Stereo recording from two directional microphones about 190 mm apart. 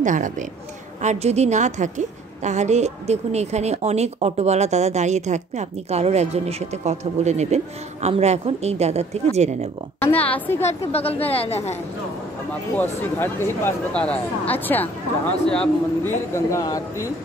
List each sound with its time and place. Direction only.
0.0 s a woman's voice: 40° right (ahead or behind)
9.9 s a man's voice: 10° left (ahead or behind)
10.9 s a woman's voice: 30° left (ahead or behind)
13.2 s a man's voice: 10° left (ahead or behind)